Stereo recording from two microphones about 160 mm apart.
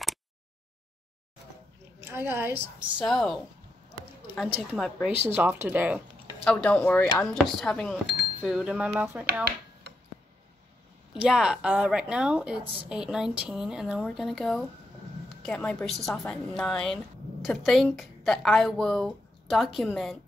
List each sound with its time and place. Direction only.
2.0 s a woman's voice: 15° right (ahead or behind)
3.0 s a woman's voice: centre (ahead or behind)
4.4 s a woman's voice: 5° left (ahead or behind)
5.3 s speech: 15° right (ahead or behind)
6.4 s a woman's voice: 5° left (ahead or behind); by 9.2 s 10° right (ahead or behind)
9.2 s finger snapping: 70° right (ahead or behind)
11.1 s a woman's voice: 5° right (ahead or behind)